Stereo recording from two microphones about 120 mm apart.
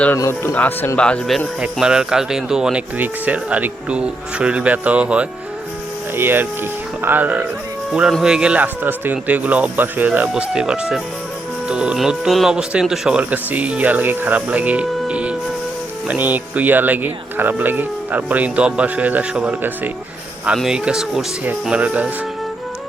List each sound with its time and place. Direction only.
0.2 s speech: 20° left (ahead or behind)
1.6 s speech: 5° right (ahead or behind)